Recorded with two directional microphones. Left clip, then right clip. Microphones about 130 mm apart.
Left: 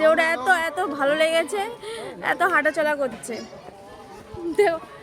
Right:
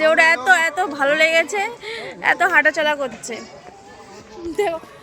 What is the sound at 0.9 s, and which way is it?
Speech, 15° left (ahead or behind).